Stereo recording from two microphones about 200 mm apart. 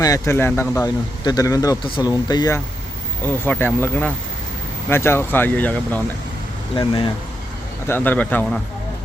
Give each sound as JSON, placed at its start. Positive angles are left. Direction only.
{"t": 0.0, "sound": "speech", "side_deg": 15}
{"t": 6.7, "sound": "speech", "side_deg": 25}
{"t": 7.9, "sound": "speech", "side_deg": 10}